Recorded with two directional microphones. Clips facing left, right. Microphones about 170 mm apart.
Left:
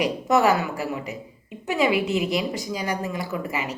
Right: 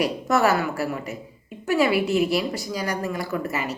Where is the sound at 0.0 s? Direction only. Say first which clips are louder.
Left 1 dB; 15° left (ahead or behind).